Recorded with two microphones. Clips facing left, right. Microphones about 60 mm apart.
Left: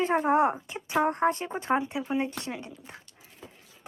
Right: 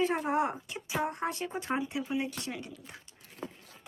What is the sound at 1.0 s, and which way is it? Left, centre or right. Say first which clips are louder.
Speech: left 8 dB; left.